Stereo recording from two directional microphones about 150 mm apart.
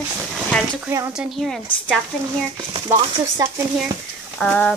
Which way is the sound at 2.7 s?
30° right (ahead or behind).